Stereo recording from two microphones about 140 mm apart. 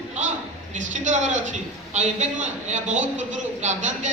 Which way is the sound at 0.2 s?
60° right (ahead or behind).